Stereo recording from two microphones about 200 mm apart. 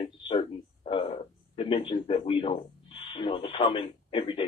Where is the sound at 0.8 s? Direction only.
25° left (ahead or behind).